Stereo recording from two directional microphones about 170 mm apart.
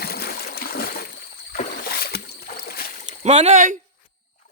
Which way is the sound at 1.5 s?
65° left (ahead or behind).